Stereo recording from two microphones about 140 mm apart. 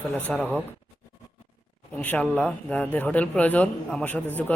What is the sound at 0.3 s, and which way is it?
Speech, 15° right (ahead or behind).